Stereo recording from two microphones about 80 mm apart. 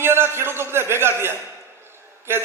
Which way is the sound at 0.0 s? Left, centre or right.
Right.